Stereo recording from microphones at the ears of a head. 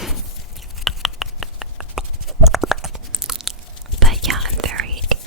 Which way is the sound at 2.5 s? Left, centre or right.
Centre.